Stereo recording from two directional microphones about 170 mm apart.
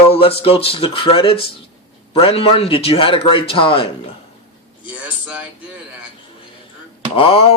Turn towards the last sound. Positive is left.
turn(degrees=35)  # may be behind; listen again after turning